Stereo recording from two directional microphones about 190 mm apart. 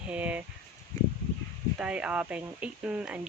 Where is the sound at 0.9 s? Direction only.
15° left (ahead or behind).